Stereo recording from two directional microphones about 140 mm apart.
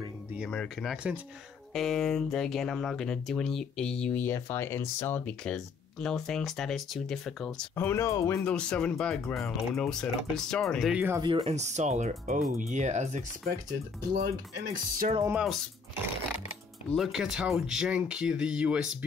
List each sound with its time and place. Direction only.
0.5 s speech: 5° left (ahead or behind)
7.7 s speech: 15° left (ahead or behind); by 11.0 s centre (ahead or behind)
11.1 s speech: 25° right (ahead or behind)
11.4 s speech: 55° right (ahead or behind)
14.1 s speech: 80° right
16.9 s speech: centre (ahead or behind)